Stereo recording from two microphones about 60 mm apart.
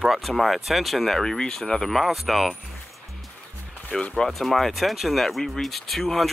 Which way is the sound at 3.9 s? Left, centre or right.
Centre.